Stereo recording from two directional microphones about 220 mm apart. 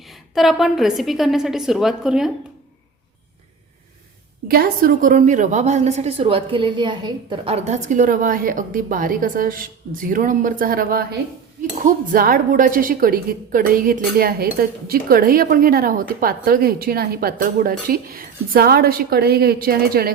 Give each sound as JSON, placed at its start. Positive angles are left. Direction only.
{"t": 0.1, "sound": "a woman's voice", "side_deg": 0}
{"t": 4.4, "sound": "a woman's voice", "side_deg": -45}